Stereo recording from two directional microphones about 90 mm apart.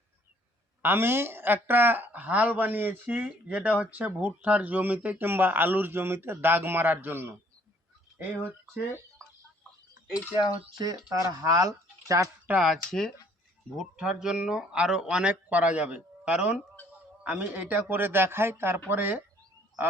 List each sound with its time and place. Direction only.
0.8 s speech: 25° right (ahead or behind)
10.8 s speech: 40° right (ahead or behind)
12.5 s speech: 5° right (ahead or behind); by 19.2 s 20° right (ahead or behind)